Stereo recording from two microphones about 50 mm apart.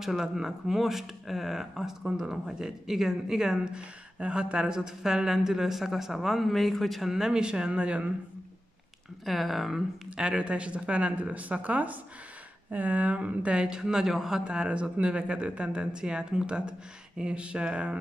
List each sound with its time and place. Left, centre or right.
0.2 s speech: centre
3.7 s speech: right; by 7.1 s centre
7.1 s speech: centre
9.2 s speech: centre
10.1 s speech: centre